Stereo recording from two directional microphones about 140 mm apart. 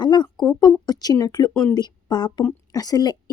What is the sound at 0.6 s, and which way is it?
A woman's voice, 30° left (ahead or behind).